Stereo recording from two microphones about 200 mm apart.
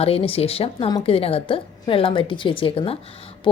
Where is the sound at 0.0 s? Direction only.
30° left (ahead or behind).